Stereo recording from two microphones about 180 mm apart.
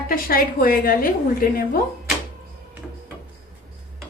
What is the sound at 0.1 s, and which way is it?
A woman's voice, 55° left (ahead or behind).